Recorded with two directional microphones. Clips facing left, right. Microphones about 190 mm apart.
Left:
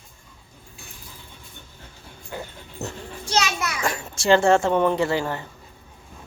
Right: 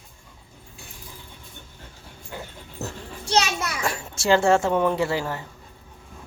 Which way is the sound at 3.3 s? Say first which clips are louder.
Right 1 dB; 30° right (ahead or behind).